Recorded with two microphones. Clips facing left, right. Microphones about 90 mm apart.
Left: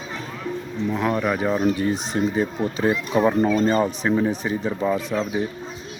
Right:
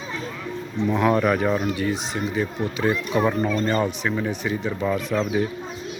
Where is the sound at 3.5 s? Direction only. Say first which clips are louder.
Left 3 dB; 30° left (ahead or behind).